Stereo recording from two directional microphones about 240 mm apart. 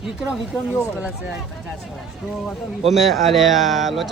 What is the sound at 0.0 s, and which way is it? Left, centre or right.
A man's voice, centre.